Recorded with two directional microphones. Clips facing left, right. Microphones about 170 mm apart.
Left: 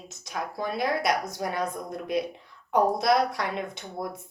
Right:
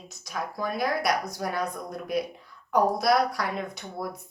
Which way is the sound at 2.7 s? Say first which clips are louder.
Even; 25° left (ahead or behind).